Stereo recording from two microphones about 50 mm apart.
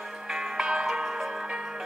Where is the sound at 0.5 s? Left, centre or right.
Centre.